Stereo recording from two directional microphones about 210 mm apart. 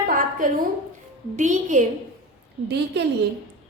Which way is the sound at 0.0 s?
40° right (ahead or behind).